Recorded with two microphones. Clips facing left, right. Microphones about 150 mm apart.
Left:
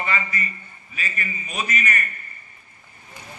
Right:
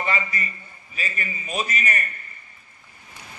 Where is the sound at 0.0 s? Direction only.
35° right (ahead or behind).